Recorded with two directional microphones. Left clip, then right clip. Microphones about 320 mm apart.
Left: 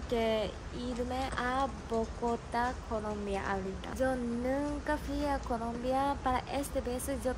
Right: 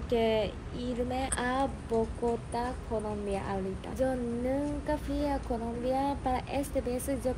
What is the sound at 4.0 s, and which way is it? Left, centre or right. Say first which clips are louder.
Speech: right 2 dB; centre.